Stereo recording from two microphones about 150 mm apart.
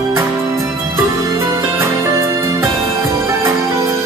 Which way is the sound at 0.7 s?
20° right (ahead or behind).